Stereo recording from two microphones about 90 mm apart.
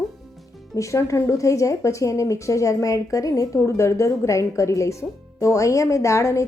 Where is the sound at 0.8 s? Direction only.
35° left (ahead or behind).